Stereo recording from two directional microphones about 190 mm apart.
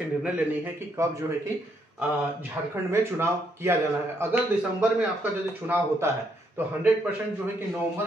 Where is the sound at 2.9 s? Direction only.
15° right (ahead or behind).